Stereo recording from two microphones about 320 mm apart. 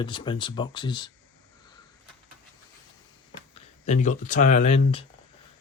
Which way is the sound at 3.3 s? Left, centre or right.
Centre.